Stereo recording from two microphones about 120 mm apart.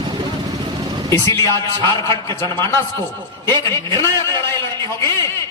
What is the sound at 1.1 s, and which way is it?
A man's voice, 25° left (ahead or behind).